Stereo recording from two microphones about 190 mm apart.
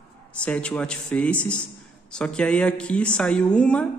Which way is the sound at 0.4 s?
5° left (ahead or behind).